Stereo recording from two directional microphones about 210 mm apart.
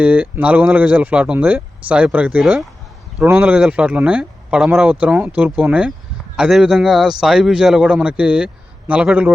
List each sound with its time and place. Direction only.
0.0 s a man's voice: 5° right (ahead or behind)